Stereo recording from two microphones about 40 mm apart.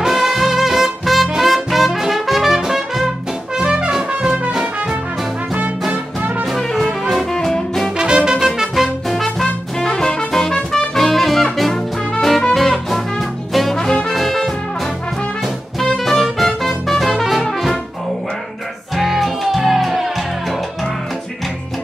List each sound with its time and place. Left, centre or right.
0.0 s music: centre
3.5 s trumpet: right
6.5 s brass instrument: centre
7.3 s music: centre
8.0 s music: right
9.1 s music: centre
13.7 s brass instrument: centre
14.1 s brass instrument: centre
16.0 s music: centre
17.4 s brass instrument: centre
18.9 s music: centre